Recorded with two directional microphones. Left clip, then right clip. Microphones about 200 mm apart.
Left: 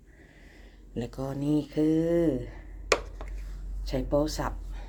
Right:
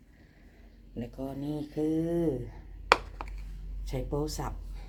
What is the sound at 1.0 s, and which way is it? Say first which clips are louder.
Speech: left 4 dB; 40° left (ahead or behind).